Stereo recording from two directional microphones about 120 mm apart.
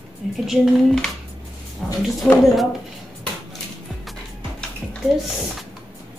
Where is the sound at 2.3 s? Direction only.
10° left (ahead or behind).